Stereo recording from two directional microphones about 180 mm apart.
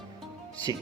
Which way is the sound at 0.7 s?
20° right (ahead or behind).